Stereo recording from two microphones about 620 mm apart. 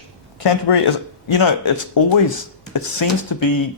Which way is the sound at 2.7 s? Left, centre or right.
Left.